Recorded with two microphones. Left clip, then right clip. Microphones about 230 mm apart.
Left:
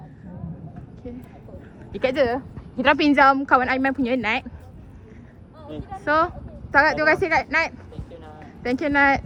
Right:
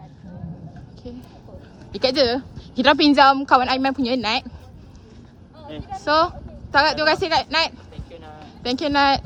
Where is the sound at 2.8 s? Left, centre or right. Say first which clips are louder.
Right 2 dB; centre.